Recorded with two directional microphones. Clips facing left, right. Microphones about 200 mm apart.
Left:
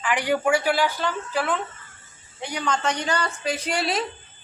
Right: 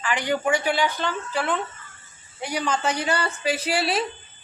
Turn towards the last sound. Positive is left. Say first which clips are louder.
# right 1 dB
turn(degrees=-5)  # may be behind; listen again after turning